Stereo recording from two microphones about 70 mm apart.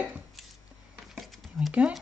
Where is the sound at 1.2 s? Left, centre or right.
Centre.